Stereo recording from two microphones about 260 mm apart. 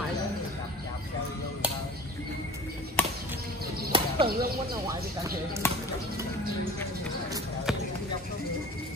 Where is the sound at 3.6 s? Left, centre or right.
Right.